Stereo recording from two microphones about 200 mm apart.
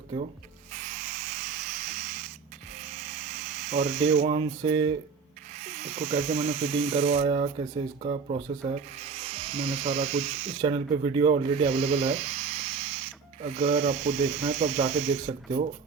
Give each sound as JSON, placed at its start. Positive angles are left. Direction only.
{"t": 0.7, "sound": "owl", "side_deg": -40}
{"t": 2.0, "sound": "rodents", "side_deg": -35}
{"t": 2.7, "sound": "electric toothbrush", "side_deg": -35}
{"t": 5.5, "sound": "speech", "side_deg": -35}